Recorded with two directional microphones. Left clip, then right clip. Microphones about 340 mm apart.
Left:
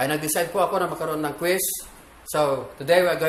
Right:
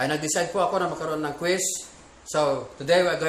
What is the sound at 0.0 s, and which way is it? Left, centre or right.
A man's voice, centre.